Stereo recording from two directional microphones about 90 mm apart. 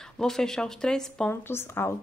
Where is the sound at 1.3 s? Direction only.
25° left (ahead or behind).